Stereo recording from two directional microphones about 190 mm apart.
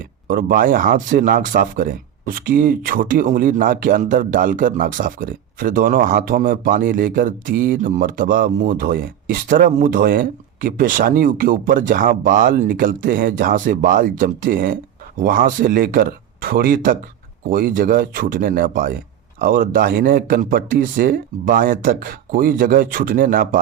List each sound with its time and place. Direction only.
0.3 s speech: 45° right (ahead or behind)